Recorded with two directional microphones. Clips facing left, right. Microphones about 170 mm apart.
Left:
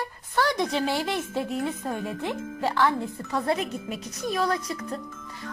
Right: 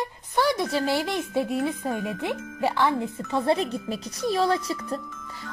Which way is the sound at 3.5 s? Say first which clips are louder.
Right 4 dB; 30° right (ahead or behind).